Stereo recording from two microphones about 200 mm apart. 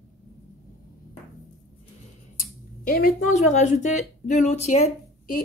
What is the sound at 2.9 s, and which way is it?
Speech, 45° left (ahead or behind).